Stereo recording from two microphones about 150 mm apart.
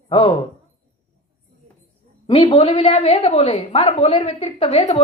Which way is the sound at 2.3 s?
40° left (ahead or behind).